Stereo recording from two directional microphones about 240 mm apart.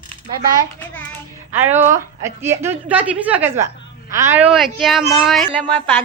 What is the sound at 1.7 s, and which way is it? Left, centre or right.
Speech, right.